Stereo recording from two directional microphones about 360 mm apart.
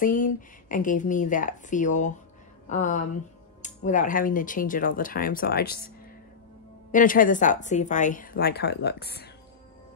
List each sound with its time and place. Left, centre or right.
0.0 s a woman's voice: left
6.9 s a woman's voice: left